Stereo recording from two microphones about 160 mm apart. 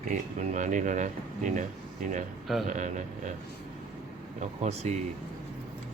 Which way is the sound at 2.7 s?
50° right (ahead or behind).